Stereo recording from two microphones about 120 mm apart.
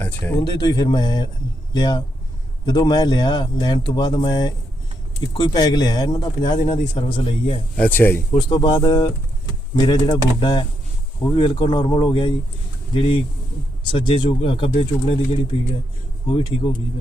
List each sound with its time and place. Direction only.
0.0 s speech: 15° left (ahead or behind)
0.3 s speech: 35° left (ahead or behind)
7.8 s speech: 15° left (ahead or behind)
8.4 s speech: 40° left (ahead or behind)
16.2 s speech: 45° left (ahead or behind)